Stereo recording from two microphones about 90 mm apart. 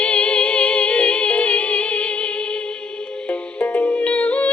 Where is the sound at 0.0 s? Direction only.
15° left (ahead or behind).